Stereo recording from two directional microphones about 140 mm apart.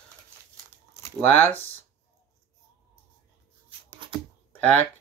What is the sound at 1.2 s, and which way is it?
Speech, 15° left (ahead or behind).